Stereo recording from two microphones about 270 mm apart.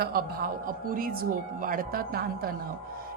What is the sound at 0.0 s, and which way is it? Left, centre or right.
A woman's voice, right.